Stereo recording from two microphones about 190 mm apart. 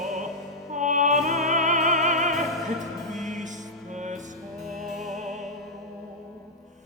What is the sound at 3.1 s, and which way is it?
Music, 40° right (ahead or behind).